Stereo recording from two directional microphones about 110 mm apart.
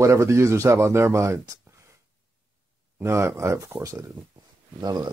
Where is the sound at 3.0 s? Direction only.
25° right (ahead or behind).